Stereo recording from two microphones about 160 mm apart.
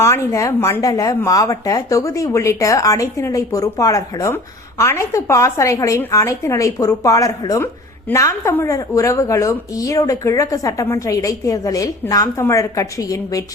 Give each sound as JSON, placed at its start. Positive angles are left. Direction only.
{"t": 0.0, "sound": "speech", "side_deg": 15}